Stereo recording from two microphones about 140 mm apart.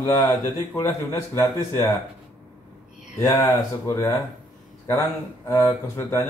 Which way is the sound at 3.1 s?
20° left (ahead or behind).